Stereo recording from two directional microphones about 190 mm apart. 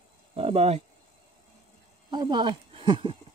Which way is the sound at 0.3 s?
30° right (ahead or behind).